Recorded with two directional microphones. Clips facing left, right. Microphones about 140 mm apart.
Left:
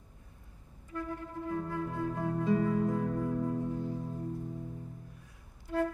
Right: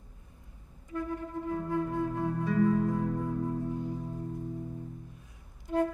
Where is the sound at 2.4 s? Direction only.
20° left (ahead or behind).